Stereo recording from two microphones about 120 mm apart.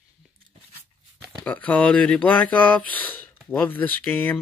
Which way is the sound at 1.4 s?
10° left (ahead or behind).